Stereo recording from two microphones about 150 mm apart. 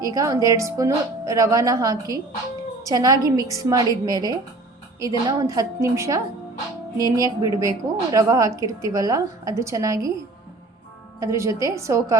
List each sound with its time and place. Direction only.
0.0 s a woman's voice: 25° right (ahead or behind)
11.2 s a woman's voice: 20° right (ahead or behind)